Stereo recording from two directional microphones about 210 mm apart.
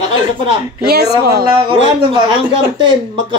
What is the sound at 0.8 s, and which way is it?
Speech, 50° right (ahead or behind).